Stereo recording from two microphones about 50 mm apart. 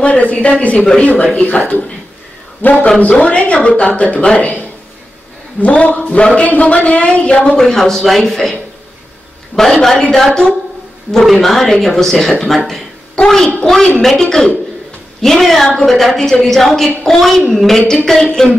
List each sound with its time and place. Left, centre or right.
0.0 s a man's voice: left
7.5 s a man's voice: centre
9.6 s a man's voice: centre